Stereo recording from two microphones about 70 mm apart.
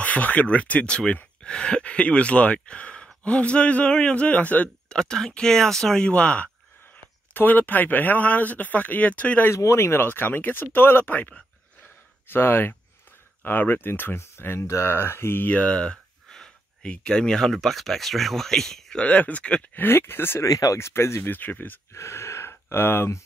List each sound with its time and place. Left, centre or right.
0.0 s speech: left
4.8 s speech: centre
9.6 s speech: left; by 19.0 s centre
19.0 s speech: left
19.7 s speech: left
20.4 s speech: left
21.9 s gasp: left